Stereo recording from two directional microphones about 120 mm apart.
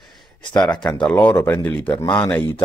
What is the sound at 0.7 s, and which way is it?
Speech, 10° left (ahead or behind).